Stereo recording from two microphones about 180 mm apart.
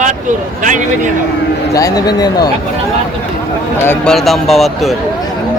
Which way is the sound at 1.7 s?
20° left (ahead or behind).